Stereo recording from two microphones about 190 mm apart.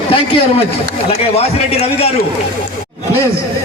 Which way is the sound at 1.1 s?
30° left (ahead or behind).